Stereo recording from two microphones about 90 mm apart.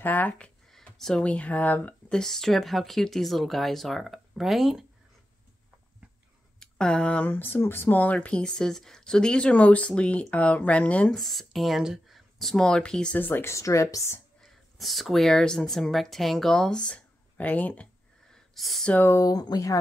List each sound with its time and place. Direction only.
0.0 s speech: 20° left (ahead or behind)
0.7 s speech: 5° left (ahead or behind)
2.0 s speech: 5° left (ahead or behind)
6.6 s speech: 10° left (ahead or behind)
11.1 s speech: centre (ahead or behind)
13.2 s speech: 25° left (ahead or behind)
14.4 s speech: centre (ahead or behind); by 17.8 s 15° left (ahead or behind)
18.3 s a sound: centre (ahead or behind)
19.0 s speech: 35° left (ahead or behind)